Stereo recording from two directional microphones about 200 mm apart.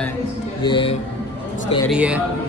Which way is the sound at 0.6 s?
25° left (ahead or behind).